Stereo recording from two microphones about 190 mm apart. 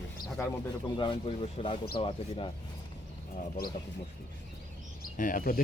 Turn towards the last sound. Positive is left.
turn(degrees=50)  # may be behind; listen again after turning